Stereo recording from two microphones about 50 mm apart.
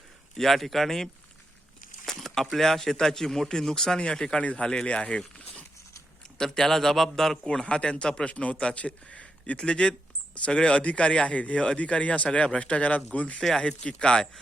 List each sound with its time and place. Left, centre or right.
0.3 s a man's voice: centre
6.3 s speech: centre
7.4 s a man's voice: centre
13.4 s a man's voice: centre